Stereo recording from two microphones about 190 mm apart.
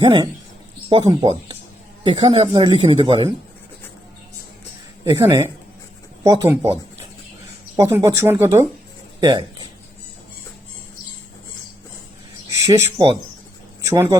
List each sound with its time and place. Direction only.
0.0 s speech: 25° right (ahead or behind)
5.0 s speech: 15° right (ahead or behind)
7.8 s speech: 15° right (ahead or behind)
12.5 s a sound: 15° right (ahead or behind)
13.8 s speech: 15° right (ahead or behind)